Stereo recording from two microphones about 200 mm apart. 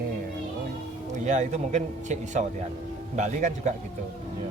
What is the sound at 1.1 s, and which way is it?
Speech, 35° right (ahead or behind).